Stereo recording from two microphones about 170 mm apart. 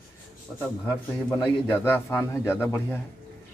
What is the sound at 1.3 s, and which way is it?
Speech, 10° left (ahead or behind).